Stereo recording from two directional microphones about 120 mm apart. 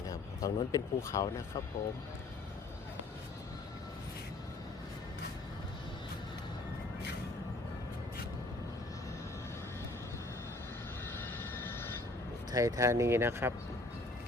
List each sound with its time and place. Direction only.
0.0 s speech: 30° left (ahead or behind)
12.5 s speech: 30° right (ahead or behind)